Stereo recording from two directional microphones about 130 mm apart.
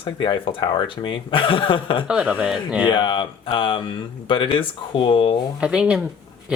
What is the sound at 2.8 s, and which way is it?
Speech, 40° left (ahead or behind).